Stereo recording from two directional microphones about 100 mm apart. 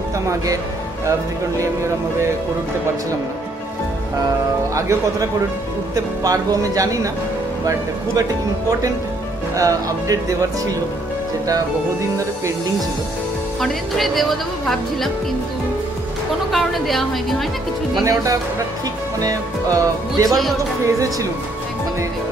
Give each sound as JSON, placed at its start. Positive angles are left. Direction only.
{"t": 1.6, "sound": "speech", "side_deg": -30}
{"t": 4.7, "sound": "music", "side_deg": -30}
{"t": 8.2, "sound": "music", "side_deg": -35}
{"t": 13.6, "sound": "speech", "side_deg": 0}
{"t": 16.5, "sound": "a woman's voice", "side_deg": 0}
{"t": 18.0, "sound": "music", "side_deg": -35}